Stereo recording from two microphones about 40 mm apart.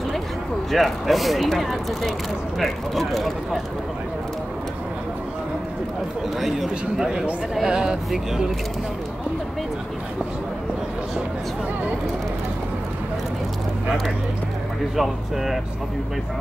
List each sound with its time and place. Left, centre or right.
0.7 s speech: centre
6.4 s speech: centre
15.0 s speech: centre